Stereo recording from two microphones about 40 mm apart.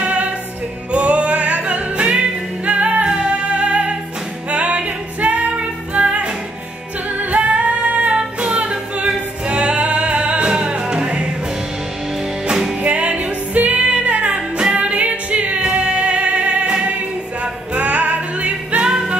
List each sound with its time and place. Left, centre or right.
0.0 s music: right
8.2 s music: right
8.5 s singing: right
12.8 s music: right
18.9 s music: centre